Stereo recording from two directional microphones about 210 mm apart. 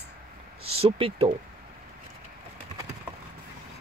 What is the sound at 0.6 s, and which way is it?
Speech, 25° right (ahead or behind).